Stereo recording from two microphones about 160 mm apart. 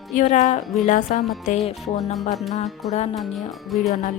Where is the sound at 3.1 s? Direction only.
Centre (ahead or behind).